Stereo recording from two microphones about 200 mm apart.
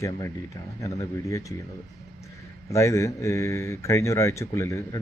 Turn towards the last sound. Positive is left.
turn(degrees=15)  # may be behind; listen again after turning